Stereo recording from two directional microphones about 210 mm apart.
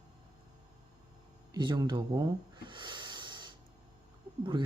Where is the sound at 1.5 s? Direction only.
20° right (ahead or behind).